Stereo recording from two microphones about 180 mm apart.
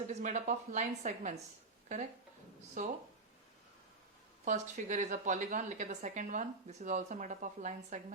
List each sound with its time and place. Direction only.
0.1 s a woman's voice: 45° right (ahead or behind)
2.8 s a woman's voice: 45° right (ahead or behind)
4.4 s a woman's voice: 45° right (ahead or behind)